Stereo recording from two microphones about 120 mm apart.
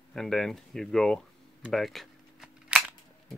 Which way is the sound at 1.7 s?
Centre (ahead or behind).